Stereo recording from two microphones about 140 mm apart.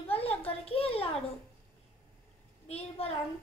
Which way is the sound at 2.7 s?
50° left (ahead or behind).